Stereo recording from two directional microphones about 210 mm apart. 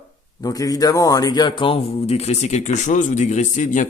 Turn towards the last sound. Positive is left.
turn(degrees=35)  # may be behind; listen again after turning